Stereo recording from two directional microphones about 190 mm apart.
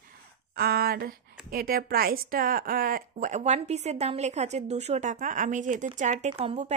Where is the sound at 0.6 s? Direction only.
55° right (ahead or behind).